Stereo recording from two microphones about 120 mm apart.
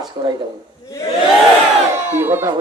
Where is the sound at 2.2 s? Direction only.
20° right (ahead or behind).